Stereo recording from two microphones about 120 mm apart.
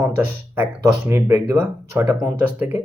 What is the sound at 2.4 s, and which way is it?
Speech, 15° right (ahead or behind).